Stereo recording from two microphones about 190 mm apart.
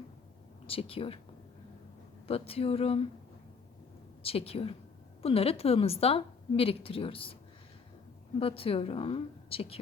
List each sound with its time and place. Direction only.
0.7 s a woman's voice: 30° left (ahead or behind)
2.2 s speech: 30° left (ahead or behind)
4.2 s a woman's voice: 30° left (ahead or behind)
8.4 s a woman's voice: 30° left (ahead or behind)